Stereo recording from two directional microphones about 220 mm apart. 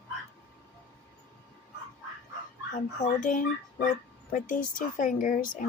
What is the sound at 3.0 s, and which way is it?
Speech, 35° left (ahead or behind).